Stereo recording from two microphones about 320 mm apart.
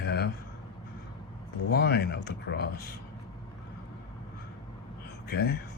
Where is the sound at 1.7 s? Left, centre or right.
Left.